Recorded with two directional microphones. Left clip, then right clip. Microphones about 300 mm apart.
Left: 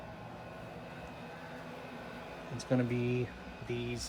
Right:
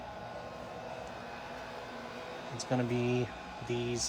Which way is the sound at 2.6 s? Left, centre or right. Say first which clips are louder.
Even; centre.